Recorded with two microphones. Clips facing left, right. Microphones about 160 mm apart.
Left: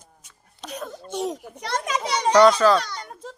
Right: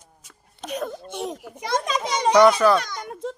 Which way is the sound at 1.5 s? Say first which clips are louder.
Right 5 dB; 10° right (ahead or behind).